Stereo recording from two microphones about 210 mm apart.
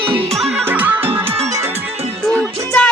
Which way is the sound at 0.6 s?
10° right (ahead or behind).